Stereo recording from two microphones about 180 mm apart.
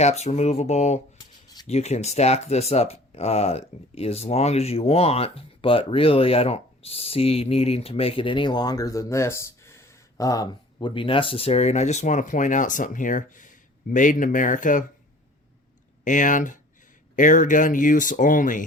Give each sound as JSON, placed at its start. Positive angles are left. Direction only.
{"t": 0.0, "sound": "speech", "side_deg": 40}
{"t": 16.0, "sound": "speech", "side_deg": 45}